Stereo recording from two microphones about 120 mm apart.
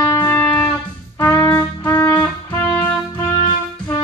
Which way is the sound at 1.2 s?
20° left (ahead or behind).